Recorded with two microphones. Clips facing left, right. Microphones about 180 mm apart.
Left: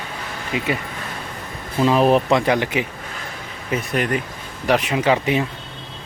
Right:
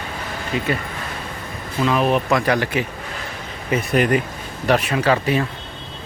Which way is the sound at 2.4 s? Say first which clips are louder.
Even; 15° left (ahead or behind).